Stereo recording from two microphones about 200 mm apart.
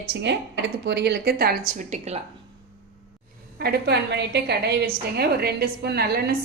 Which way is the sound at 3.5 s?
50° right (ahead or behind).